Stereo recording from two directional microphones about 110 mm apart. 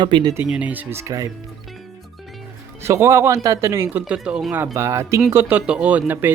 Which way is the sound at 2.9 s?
25° right (ahead or behind).